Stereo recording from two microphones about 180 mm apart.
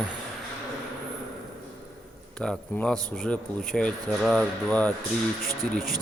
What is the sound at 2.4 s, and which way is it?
Speech, centre (ahead or behind).